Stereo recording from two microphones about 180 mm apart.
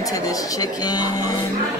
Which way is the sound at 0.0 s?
20° left (ahead or behind).